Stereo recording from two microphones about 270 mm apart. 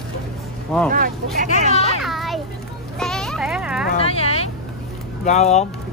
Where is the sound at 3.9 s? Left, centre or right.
Left.